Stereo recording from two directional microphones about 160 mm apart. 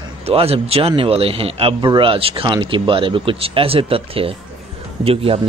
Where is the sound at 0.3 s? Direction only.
40° right (ahead or behind).